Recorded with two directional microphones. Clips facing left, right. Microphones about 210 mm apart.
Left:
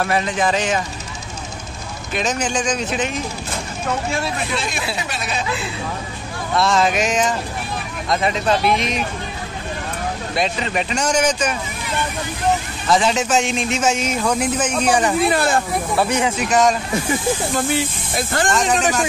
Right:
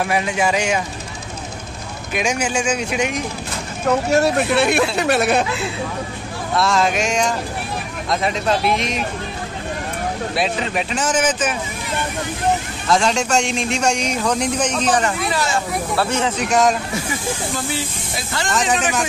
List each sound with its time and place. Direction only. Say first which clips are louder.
0.0 s speech: even; 10° right (ahead or behind)
2.1 s speech: right 1 dB; 10° right (ahead or behind)
3.8 s speech: right 8 dB; 45° right (ahead or behind)
4.6 s speech: right 8 dB; 65° right (ahead or behind)
6.5 s speech: left 1 dB; centre (ahead or behind)
10.3 s speech: left 1 dB; 5° right (ahead or behind)
12.8 s speech: even; 5° left (ahead or behind)
15.3 s speech: left 3 dB; 55° left (ahead or behind)
16.0 s speech: left 1 dB; 15° left (ahead or behind)
17.6 s speech: left 5 dB; 50° left (ahead or behind)
18.5 s speech: right 1 dB; centre (ahead or behind)